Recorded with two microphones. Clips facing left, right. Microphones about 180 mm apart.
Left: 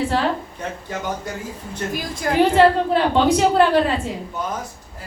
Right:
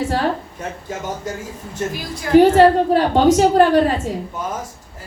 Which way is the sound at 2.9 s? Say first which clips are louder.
Right 3 dB; 45° right (ahead or behind).